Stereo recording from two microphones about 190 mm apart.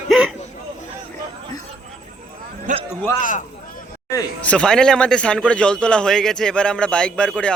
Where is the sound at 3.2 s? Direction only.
40° left (ahead or behind).